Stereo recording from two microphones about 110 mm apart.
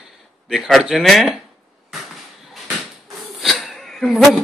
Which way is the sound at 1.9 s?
Centre (ahead or behind).